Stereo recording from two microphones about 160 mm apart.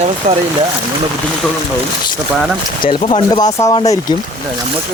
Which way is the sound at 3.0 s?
30° left (ahead or behind).